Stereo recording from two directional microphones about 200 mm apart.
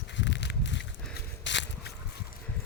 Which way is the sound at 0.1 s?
65° left (ahead or behind).